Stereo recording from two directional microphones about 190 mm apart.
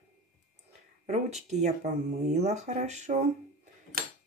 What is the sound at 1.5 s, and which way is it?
Speech, 35° right (ahead or behind).